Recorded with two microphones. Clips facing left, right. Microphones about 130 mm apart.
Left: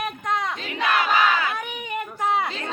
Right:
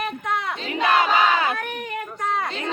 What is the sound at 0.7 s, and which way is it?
Crowd, 25° right (ahead or behind).